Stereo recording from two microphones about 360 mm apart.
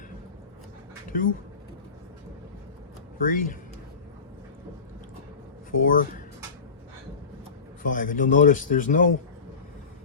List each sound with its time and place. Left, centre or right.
1.1 s a man's voice: left
3.2 s a man's voice: left
5.7 s a man's voice: left
7.8 s a man's voice: left